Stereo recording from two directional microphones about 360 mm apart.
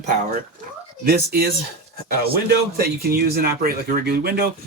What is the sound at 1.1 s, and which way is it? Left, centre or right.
Speech, right.